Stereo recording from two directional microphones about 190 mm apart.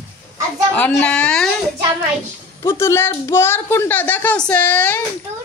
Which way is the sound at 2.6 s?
15° left (ahead or behind).